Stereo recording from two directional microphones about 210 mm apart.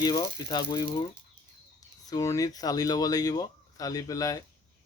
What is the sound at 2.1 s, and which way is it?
Speech, 15° left (ahead or behind).